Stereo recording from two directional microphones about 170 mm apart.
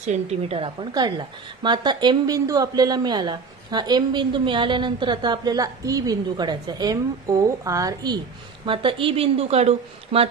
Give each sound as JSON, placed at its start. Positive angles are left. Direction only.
{"t": 0.0, "sound": "a woman's voice", "side_deg": -40}